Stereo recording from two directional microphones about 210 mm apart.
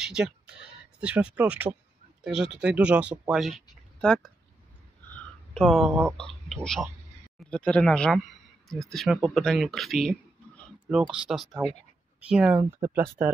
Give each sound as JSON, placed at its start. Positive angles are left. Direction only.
{"t": 0.0, "sound": "speech", "side_deg": -5}
{"t": 5.1, "sound": "a sound", "side_deg": 5}
{"t": 6.1, "sound": "speech", "side_deg": 5}